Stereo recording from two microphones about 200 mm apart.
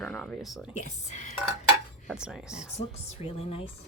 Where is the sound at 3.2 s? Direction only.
30° left (ahead or behind).